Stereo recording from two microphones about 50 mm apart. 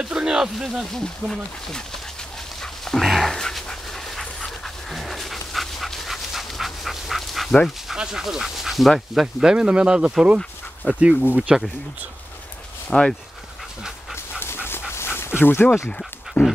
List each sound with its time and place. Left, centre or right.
0.0 s a sound: centre
0.9 s speech: centre
2.6 s dog: centre
3.3 s dog: centre
7.9 s speech: centre
10.2 s dog: right
11.2 s speech: right
12.9 s speech: centre
14.4 s dog: left
16.4 s dog: left